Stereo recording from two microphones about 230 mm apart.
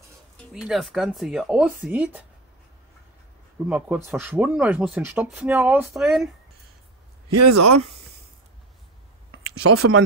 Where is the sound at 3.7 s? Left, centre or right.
Centre.